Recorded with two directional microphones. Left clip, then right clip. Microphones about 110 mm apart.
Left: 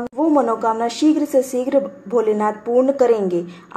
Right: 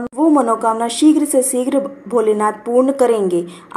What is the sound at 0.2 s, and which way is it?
A woman's voice, 25° right (ahead or behind).